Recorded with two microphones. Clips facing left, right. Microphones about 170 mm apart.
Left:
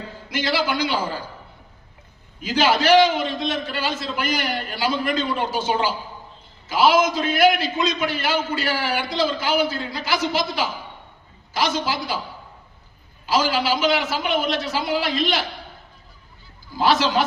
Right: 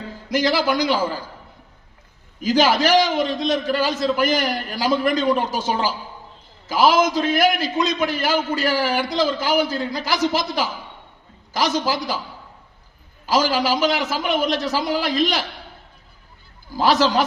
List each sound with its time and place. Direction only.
0.3 s a man's voice: 40° right (ahead or behind)
2.4 s a man's voice: 40° right (ahead or behind)
13.2 s a man's voice: 40° right (ahead or behind)
16.8 s a man's voice: 45° right (ahead or behind)